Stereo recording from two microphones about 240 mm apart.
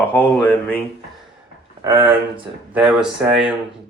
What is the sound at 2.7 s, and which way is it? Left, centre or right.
Speech, centre.